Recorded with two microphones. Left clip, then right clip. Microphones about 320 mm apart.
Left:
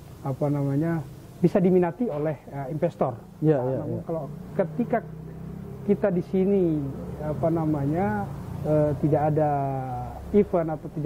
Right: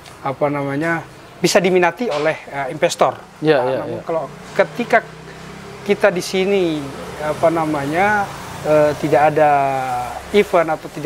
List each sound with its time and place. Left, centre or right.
0.2 s speech: centre